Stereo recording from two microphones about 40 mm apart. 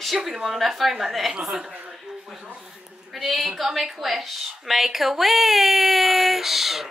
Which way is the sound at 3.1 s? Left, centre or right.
Centre.